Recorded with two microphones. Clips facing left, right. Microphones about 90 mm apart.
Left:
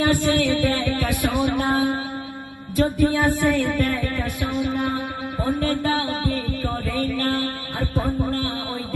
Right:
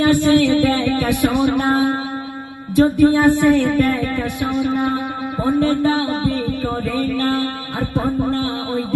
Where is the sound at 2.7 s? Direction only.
20° right (ahead or behind).